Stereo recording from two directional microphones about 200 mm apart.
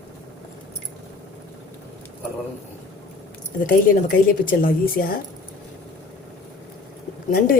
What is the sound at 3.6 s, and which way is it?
A woman's voice, 45° left (ahead or behind).